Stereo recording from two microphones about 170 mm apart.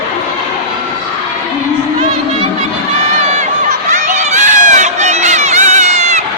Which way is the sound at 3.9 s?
45° right (ahead or behind).